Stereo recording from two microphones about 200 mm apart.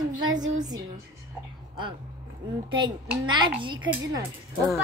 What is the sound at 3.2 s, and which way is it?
Speech, 25° right (ahead or behind).